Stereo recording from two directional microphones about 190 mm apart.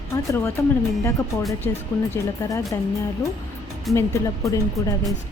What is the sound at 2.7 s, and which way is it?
Speech, 15° left (ahead or behind).